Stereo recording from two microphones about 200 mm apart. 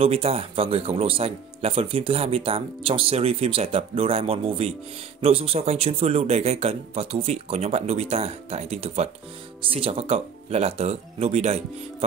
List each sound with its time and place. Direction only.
0.0 s a man's voice: 30° right (ahead or behind)